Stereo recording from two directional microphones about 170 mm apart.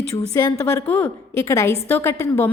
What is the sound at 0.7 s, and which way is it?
A woman's voice, 10° left (ahead or behind).